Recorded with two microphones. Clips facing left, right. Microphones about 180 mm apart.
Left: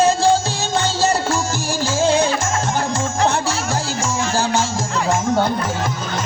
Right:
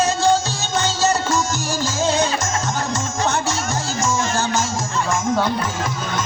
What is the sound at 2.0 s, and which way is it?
Music, 30° left (ahead or behind).